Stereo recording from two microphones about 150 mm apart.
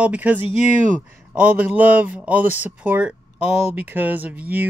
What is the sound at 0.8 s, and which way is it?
Speech, 60° right (ahead or behind).